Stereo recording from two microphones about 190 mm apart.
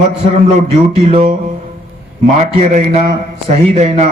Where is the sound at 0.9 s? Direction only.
35° right (ahead or behind).